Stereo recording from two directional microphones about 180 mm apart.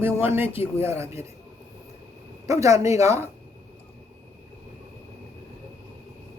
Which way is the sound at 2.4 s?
15° right (ahead or behind).